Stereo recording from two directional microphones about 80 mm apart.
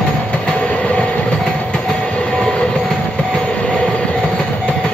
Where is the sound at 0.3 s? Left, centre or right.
Centre.